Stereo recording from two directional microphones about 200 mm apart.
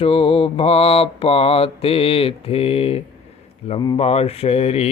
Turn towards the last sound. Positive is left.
turn(degrees=30)  # may be behind; listen again after turning